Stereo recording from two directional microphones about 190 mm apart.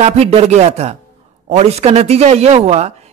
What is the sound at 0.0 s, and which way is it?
Speech, 30° right (ahead or behind).